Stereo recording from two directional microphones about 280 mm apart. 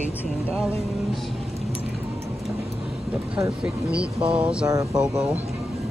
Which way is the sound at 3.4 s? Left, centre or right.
Centre.